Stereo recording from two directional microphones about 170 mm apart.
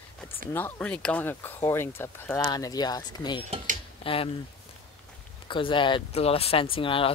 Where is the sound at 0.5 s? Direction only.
15° left (ahead or behind); by 4.3 s 30° left (ahead or behind).